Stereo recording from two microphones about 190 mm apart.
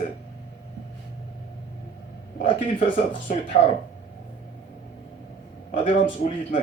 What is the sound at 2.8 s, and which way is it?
Speech, 45° left (ahead or behind).